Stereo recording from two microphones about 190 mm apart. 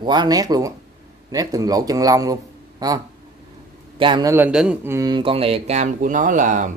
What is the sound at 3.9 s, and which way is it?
Speech, 25° right (ahead or behind).